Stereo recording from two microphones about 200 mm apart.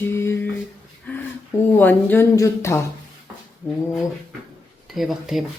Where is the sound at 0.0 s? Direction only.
10° left (ahead or behind).